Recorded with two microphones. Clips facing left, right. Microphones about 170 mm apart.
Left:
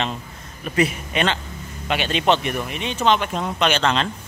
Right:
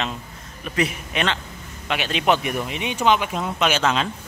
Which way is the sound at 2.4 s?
15° right (ahead or behind).